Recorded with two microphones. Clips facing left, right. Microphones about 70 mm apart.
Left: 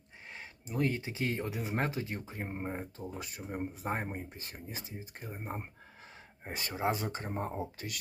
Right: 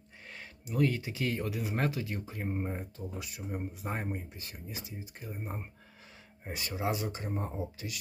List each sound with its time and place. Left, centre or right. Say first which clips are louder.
0.3 s speech: right 4 dB; left
3.0 s speech: even; left